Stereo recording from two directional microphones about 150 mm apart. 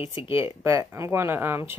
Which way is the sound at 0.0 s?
35° left (ahead or behind).